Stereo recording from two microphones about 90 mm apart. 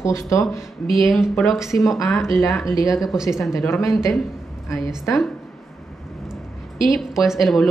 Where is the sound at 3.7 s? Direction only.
35° left (ahead or behind).